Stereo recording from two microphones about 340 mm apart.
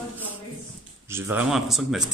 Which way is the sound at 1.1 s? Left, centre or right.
Centre.